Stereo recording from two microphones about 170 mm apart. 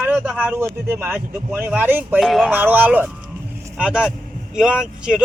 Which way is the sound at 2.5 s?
10° right (ahead or behind).